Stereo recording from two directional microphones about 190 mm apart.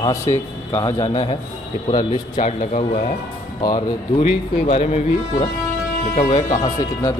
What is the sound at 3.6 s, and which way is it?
Speech, 20° left (ahead or behind).